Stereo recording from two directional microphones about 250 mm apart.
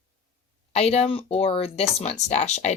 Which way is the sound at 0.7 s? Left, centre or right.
Left.